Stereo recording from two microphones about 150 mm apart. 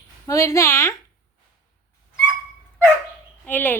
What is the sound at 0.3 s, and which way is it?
Speech, 20° left (ahead or behind).